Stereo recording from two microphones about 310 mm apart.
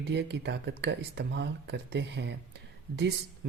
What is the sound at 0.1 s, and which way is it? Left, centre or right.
Speech, right.